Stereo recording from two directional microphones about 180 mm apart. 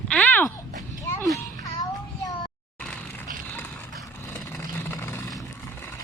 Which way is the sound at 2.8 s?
5° left (ahead or behind).